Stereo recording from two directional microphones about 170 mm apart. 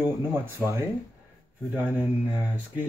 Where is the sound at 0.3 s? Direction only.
15° right (ahead or behind).